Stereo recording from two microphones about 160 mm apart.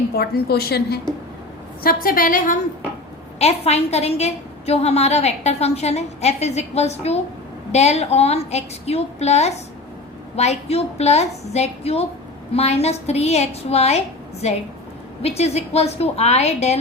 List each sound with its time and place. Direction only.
0.2 s a woman's voice: 80° left
1.8 s a woman's voice: 65° left (ahead or behind)
3.3 s a woman's voice: 40° left (ahead or behind)